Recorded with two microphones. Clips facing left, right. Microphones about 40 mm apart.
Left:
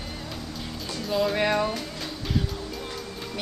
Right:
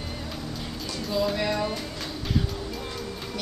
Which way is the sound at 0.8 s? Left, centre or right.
Centre.